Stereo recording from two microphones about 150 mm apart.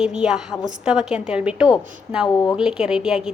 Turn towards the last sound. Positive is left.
turn(degrees=-5)  # may be behind; listen again after turning